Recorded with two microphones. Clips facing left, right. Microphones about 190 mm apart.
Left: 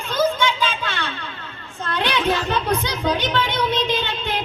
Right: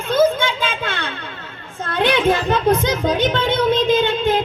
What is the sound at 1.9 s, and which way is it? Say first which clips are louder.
Chatter: right 5 dB; 50° right (ahead or behind).